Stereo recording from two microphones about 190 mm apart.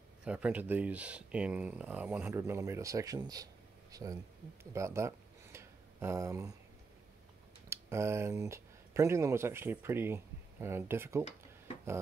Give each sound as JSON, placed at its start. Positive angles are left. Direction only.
{"t": 0.2, "sound": "speech", "side_deg": -5}
{"t": 4.7, "sound": "a sound", "side_deg": -15}
{"t": 7.7, "sound": "speech", "side_deg": -15}